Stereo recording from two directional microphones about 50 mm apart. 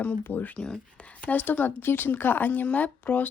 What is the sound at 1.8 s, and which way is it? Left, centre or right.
Speech, left.